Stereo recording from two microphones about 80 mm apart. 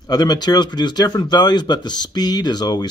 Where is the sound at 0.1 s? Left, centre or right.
Left.